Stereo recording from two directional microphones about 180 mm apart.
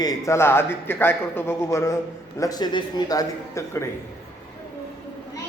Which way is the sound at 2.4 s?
20° left (ahead or behind).